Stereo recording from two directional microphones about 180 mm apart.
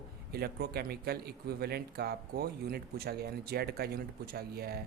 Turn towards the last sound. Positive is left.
turn(degrees=-60)  # may be behind; listen again after turning